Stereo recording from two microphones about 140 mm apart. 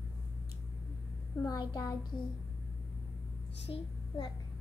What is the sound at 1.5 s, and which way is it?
Speech, 30° left (ahead or behind).